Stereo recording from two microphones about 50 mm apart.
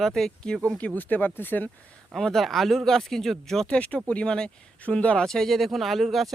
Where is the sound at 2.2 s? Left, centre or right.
Centre.